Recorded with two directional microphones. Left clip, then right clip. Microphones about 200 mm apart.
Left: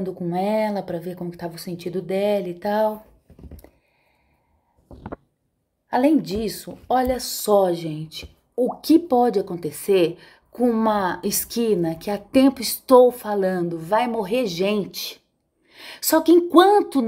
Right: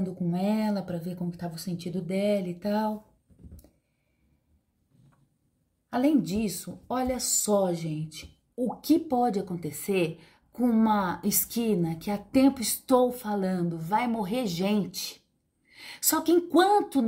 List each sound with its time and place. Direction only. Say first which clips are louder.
0.0 s a woman's voice: left 7 dB; 15° right (ahead or behind)
5.9 s a woman's voice: left 7 dB; 15° right (ahead or behind)
8.8 s a woman's voice: left 7 dB; 15° right (ahead or behind)